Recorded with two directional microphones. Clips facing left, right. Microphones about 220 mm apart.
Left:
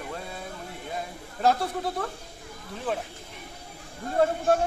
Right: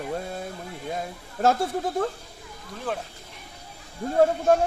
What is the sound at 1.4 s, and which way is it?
Speech, 45° right (ahead or behind).